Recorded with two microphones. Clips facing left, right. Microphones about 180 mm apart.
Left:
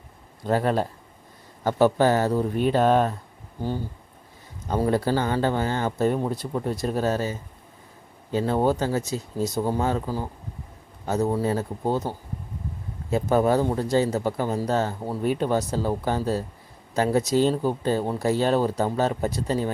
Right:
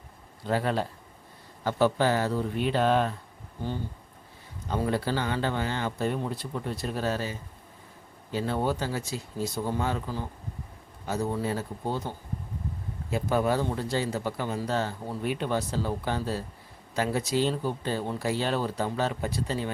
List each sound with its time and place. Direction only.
0.4 s speech: 45° left (ahead or behind)
4.7 s speech: 45° left (ahead or behind)
8.4 s speech: 45° left (ahead or behind)
13.1 s speech: 45° left (ahead or behind)